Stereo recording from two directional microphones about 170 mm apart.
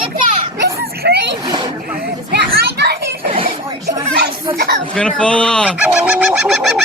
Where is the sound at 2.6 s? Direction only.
70° right (ahead or behind).